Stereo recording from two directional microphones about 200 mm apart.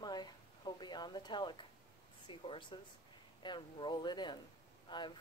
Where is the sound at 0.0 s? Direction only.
20° left (ahead or behind).